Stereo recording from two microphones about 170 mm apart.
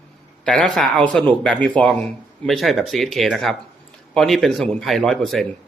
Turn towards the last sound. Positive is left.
turn(degrees=0)  # may be behind; listen again after turning